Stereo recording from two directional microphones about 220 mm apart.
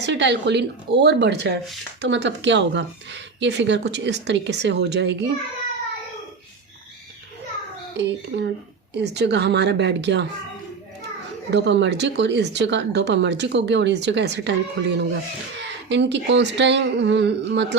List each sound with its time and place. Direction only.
0.0 s speech: 55° right (ahead or behind)
7.9 s speech: 50° right (ahead or behind)
11.5 s speech: 55° right (ahead or behind)